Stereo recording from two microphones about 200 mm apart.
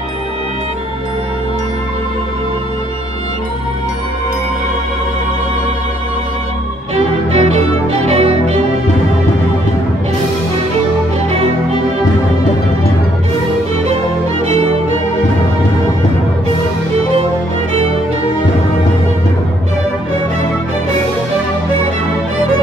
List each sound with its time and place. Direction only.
7.3 s music: 30° right (ahead or behind)